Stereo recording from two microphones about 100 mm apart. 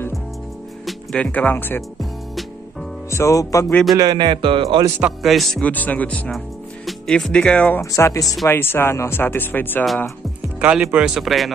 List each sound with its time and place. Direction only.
0.8 s speech: 10° left (ahead or behind)
3.1 s music: 30° left (ahead or behind)
3.9 s a man's voice: 40° right (ahead or behind); by 4.8 s 60° right (ahead or behind)
5.2 s speech: centre (ahead or behind)
5.6 s speech: 15° left (ahead or behind)
7.8 s music: 30° left (ahead or behind)
8.5 s speech: 25° left (ahead or behind)
10.6 s speech: 15° right (ahead or behind)